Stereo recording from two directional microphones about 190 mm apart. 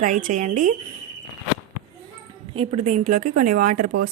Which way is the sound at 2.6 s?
35° right (ahead or behind).